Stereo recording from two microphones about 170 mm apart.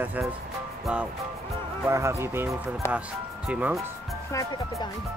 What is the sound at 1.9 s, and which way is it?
Speech, 15° right (ahead or behind).